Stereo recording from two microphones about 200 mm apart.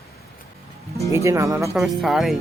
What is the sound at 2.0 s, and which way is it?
Speech, centre (ahead or behind).